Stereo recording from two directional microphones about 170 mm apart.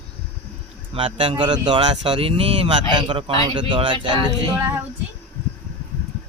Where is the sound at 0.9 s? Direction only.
30° right (ahead or behind).